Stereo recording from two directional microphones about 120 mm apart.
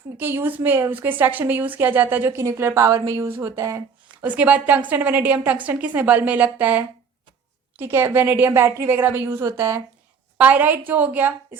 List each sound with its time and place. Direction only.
0.2 s a woman's voice: 15° right (ahead or behind)
4.2 s a woman's voice: 15° right (ahead or behind)
10.3 s a woman's voice: 15° right (ahead or behind)